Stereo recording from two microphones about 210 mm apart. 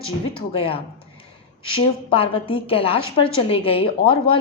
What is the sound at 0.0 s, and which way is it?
A woman's voice, 25° left (ahead or behind).